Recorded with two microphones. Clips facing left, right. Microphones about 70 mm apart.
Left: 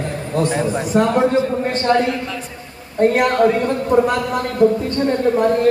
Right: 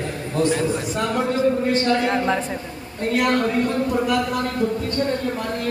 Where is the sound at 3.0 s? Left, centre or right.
Left.